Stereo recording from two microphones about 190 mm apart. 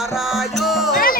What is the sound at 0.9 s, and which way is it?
Speech, 50° left (ahead or behind).